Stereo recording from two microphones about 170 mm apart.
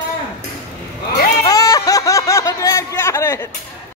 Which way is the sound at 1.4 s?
20° left (ahead or behind).